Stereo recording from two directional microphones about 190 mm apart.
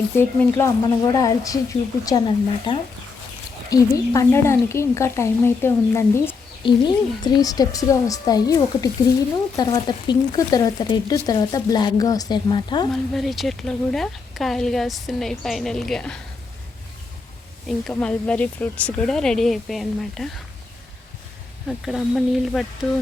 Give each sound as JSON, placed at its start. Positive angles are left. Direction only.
{"t": 0.2, "sound": "speech", "side_deg": 15}
{"t": 6.7, "sound": "speech", "side_deg": 25}
{"t": 12.9, "sound": "speech", "side_deg": 0}
{"t": 17.7, "sound": "speech", "side_deg": 5}
{"t": 21.7, "sound": "speech", "side_deg": 0}